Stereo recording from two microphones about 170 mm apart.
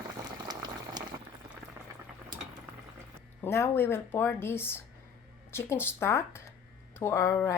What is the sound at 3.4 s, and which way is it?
Speech, 15° left (ahead or behind).